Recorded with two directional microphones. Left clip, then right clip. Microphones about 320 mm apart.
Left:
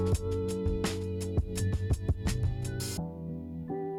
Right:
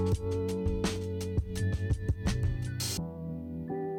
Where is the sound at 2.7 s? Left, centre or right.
Centre.